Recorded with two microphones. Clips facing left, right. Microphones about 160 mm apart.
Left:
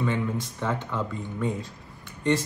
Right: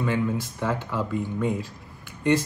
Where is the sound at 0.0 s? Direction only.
5° right (ahead or behind).